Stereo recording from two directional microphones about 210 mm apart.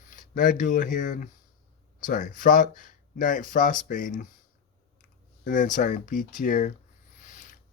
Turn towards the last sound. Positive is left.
turn(degrees=35)  # may be behind; listen again after turning